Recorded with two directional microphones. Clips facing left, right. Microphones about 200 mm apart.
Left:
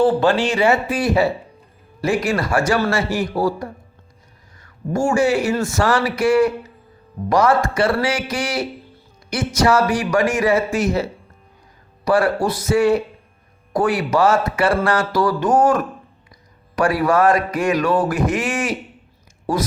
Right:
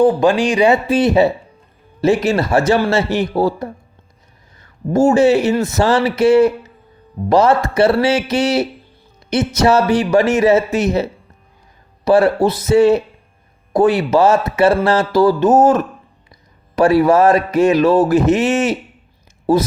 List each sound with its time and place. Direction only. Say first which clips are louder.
0.0 s speech: right 3 dB; 15° right (ahead or behind)
4.6 s speech: right 7 dB; 25° right (ahead or behind)